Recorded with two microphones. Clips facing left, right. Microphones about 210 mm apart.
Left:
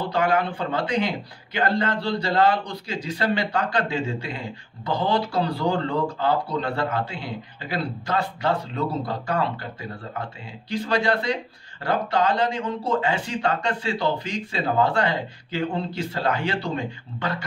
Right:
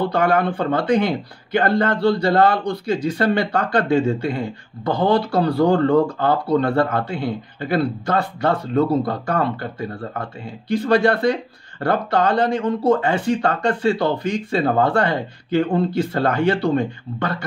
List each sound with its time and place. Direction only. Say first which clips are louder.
0.1 s speech: right 4 dB; 55° right (ahead or behind)